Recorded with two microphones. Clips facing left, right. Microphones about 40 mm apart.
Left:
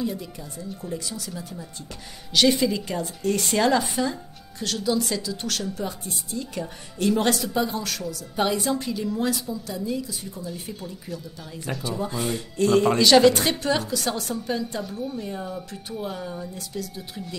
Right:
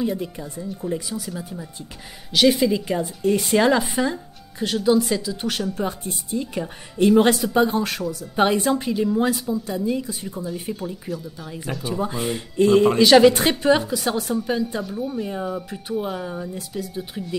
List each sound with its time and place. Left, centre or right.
0.6 s speech: centre
2.9 s speech: centre
5.8 s a woman's voice: right
7.5 s speech: right
8.7 s a woman's voice: right
11.1 s speech: centre
11.8 s speech: centre
15.2 s speech: centre